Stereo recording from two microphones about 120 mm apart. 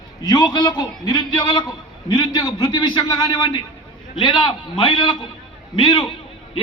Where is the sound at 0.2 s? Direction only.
35° left (ahead or behind).